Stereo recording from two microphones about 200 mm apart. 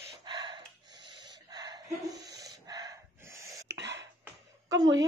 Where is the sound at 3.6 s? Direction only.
60° right (ahead or behind).